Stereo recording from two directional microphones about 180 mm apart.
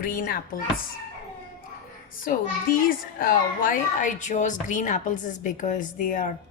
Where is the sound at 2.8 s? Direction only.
50° left (ahead or behind).